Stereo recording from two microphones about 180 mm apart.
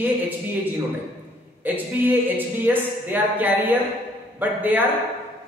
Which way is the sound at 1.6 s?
10° right (ahead or behind).